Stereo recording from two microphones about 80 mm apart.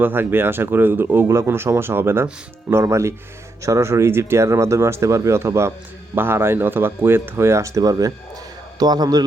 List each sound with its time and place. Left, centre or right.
0.0 s a man's voice: right